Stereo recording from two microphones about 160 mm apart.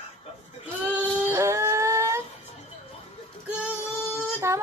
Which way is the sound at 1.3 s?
15° right (ahead or behind).